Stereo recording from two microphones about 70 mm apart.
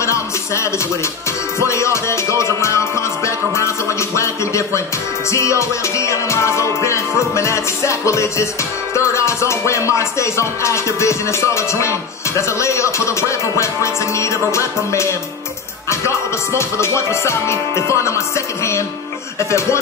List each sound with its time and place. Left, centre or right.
0.0 s music: left